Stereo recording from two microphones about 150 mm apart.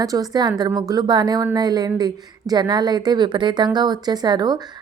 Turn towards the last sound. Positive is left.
turn(degrees=-25)  # may be behind; listen again after turning